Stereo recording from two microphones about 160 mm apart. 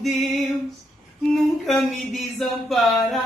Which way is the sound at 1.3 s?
Centre (ahead or behind).